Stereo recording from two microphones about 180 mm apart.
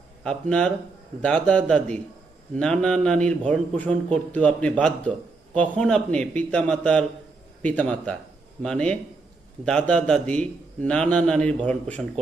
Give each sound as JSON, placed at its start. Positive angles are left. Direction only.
{"t": 0.3, "sound": "a man's voice", "side_deg": 5}